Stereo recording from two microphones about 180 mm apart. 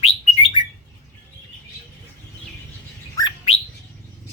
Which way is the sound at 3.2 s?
20° left (ahead or behind).